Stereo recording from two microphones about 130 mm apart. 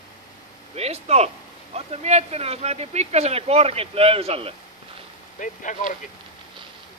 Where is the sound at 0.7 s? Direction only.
55° right (ahead or behind).